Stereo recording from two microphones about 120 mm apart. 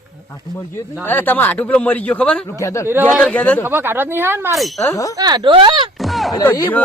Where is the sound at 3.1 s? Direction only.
5° left (ahead or behind).